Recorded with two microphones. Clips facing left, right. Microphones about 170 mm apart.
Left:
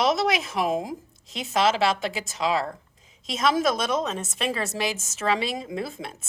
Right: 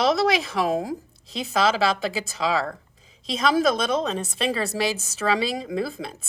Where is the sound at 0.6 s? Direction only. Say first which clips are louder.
Even; 20° left (ahead or behind).